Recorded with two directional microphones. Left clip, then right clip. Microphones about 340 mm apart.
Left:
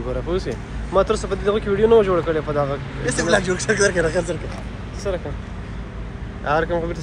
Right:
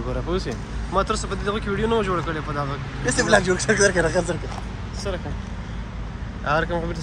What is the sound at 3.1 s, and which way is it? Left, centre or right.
Speech, centre.